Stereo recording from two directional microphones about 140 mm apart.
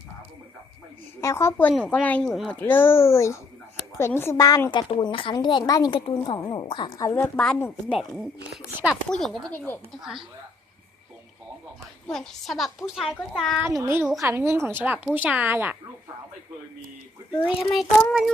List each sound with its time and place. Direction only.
1.2 s a woman's voice: 20° left (ahead or behind); by 2.6 s centre (ahead or behind)
2.6 s a woman's voice: 15° left (ahead or behind)
4.9 s a woman's voice: 40° left (ahead or behind)
7.3 s a woman's voice: 5° left (ahead or behind)
9.5 s speech: 15° left (ahead or behind)
10.0 s a woman's voice: centre (ahead or behind)
12.0 s a woman's voice: 5° left (ahead or behind)
13.7 s speech: 20° right (ahead or behind)
17.7 s a woman's voice: 5° right (ahead or behind)